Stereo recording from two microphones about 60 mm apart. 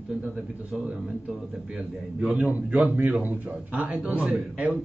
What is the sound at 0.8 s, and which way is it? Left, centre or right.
A man's voice, centre.